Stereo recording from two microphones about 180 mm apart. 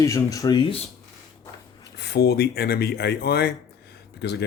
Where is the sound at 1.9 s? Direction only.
65° left (ahead or behind).